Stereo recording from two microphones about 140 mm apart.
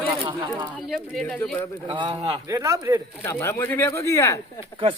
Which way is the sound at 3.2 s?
20° left (ahead or behind).